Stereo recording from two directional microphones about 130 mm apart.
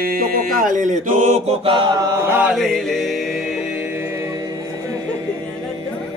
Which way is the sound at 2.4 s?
Centre (ahead or behind).